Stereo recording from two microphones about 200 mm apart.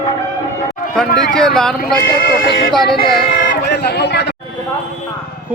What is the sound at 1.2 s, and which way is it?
Speech, centre (ahead or behind).